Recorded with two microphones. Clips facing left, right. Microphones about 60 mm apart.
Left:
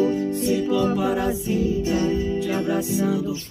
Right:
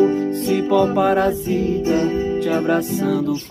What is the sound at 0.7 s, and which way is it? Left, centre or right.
Music, right.